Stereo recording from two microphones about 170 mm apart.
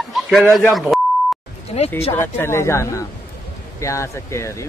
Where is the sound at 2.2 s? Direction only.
15° left (ahead or behind).